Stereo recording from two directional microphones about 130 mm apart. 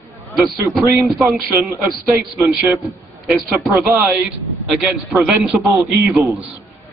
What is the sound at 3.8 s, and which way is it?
Speech, 20° right (ahead or behind).